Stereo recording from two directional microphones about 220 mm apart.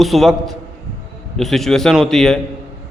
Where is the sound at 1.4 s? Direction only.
Centre (ahead or behind).